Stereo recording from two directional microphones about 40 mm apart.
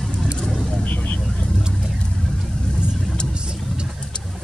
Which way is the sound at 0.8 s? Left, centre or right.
Left.